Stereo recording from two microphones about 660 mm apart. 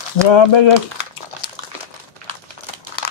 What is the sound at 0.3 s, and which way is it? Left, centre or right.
Speech, left.